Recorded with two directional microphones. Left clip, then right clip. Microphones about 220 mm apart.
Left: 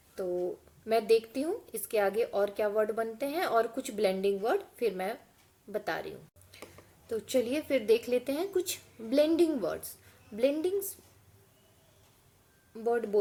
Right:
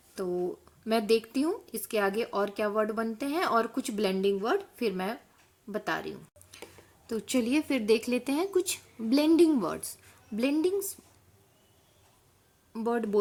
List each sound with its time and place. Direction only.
0.9 s speech: 45° right (ahead or behind)
12.7 s speech: 35° right (ahead or behind)